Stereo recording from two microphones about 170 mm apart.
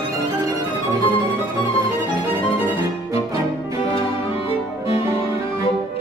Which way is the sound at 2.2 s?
15° right (ahead or behind).